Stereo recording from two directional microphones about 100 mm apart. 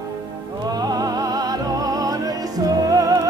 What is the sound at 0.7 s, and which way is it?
Music, 40° right (ahead or behind).